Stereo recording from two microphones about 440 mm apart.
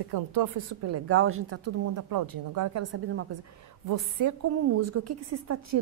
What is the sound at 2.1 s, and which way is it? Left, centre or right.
A woman's voice, right.